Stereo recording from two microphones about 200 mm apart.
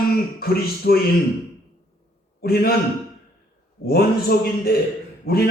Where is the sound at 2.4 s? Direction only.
50° left (ahead or behind).